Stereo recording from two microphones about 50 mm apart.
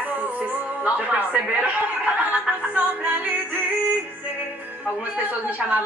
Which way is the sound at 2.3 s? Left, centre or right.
Right.